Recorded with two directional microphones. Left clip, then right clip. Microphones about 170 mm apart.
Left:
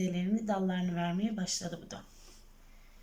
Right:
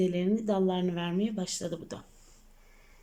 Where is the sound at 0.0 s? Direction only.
25° right (ahead or behind).